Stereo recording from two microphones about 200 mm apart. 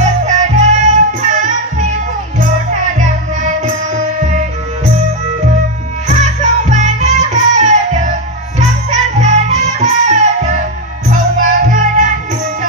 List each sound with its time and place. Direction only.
0.0 s music: 35° right (ahead or behind)
3.0 s music: 35° right (ahead or behind)
6.0 s music: 35° right (ahead or behind)